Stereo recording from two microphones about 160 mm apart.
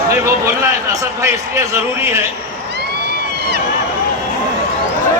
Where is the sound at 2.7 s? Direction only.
90° right.